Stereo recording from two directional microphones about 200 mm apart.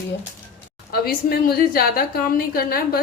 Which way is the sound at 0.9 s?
50° left (ahead or behind).